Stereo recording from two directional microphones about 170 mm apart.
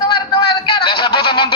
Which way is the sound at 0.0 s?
25° left (ahead or behind).